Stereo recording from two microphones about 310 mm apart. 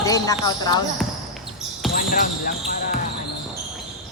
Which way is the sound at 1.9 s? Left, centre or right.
Left.